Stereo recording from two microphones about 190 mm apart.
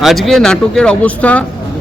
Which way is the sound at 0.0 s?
Centre (ahead or behind).